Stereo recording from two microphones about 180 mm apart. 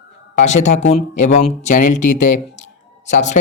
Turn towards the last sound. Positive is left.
turn(degrees=40)  # may be behind; listen again after turning